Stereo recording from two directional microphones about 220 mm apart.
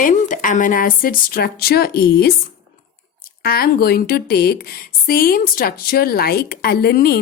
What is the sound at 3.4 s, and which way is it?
A woman's voice, 45° left (ahead or behind).